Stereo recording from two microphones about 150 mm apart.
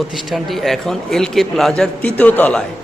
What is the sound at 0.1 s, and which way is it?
A man's voice, centre (ahead or behind).